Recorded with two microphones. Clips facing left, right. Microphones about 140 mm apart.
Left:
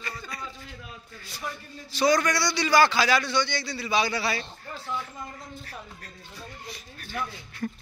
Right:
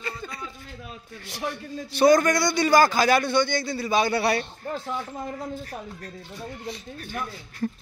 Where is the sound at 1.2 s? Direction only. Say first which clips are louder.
Right 6 dB; 75° right (ahead or behind); by 4.4 s 60° right (ahead or behind).